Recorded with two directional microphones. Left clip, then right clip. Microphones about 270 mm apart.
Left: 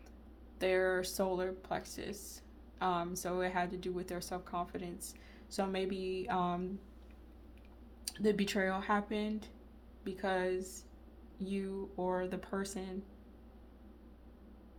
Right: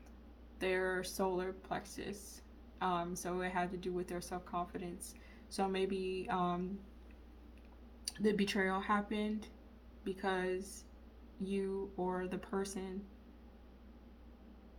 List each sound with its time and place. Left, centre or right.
0.6 s speech: centre
8.0 s speech: centre